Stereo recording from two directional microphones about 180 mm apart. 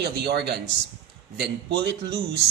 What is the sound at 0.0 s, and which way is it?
Speech, 65° right (ahead or behind).